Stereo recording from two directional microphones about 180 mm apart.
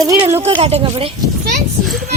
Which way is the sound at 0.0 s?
20° right (ahead or behind).